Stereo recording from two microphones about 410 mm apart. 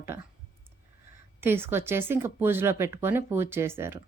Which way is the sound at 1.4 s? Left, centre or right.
Centre.